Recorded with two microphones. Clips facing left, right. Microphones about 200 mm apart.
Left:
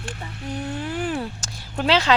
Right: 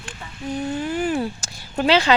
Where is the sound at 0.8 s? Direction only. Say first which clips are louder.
Right 4 dB; centre (ahead or behind).